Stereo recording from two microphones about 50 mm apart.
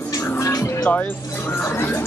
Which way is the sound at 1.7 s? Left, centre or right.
Left.